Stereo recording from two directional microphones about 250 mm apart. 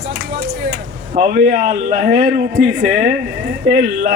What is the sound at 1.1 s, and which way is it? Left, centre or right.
A man's voice, right.